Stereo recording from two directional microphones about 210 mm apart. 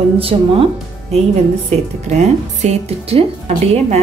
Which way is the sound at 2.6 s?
30° right (ahead or behind).